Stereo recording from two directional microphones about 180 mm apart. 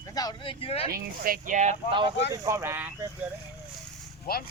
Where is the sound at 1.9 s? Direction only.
25° right (ahead or behind); by 3.1 s 10° right (ahead or behind).